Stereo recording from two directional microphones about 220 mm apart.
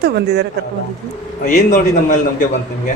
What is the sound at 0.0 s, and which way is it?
Speech, 50° right (ahead or behind).